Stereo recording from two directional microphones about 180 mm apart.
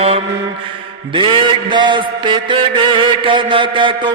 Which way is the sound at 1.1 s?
25° right (ahead or behind).